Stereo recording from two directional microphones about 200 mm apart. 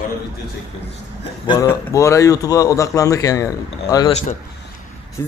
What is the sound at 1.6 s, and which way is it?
A man's voice, 15° left (ahead or behind).